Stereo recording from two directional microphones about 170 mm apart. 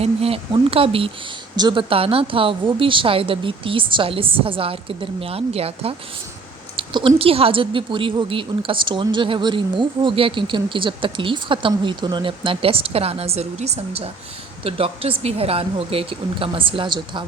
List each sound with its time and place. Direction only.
0.0 s a woman's voice: 35° right (ahead or behind)
6.7 s a sound: 30° right (ahead or behind)
7.2 s a woman's voice: 35° right (ahead or behind)